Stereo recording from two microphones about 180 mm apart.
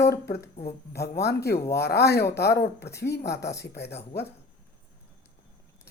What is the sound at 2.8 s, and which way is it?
Speech, 15° left (ahead or behind).